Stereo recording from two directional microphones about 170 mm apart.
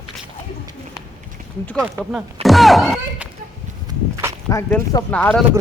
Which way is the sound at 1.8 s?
Centre (ahead or behind).